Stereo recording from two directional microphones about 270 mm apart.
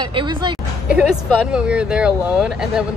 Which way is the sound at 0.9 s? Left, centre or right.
Centre.